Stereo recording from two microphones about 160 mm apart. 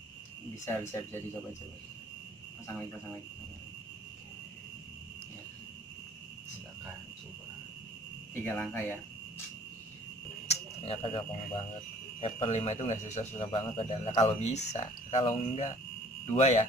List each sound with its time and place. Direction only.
0.7 s speech: 15° left (ahead or behind)
8.5 s speech: 15° left (ahead or behind)
10.5 s speech: 35° left (ahead or behind)
12.2 s speech: 45° left (ahead or behind)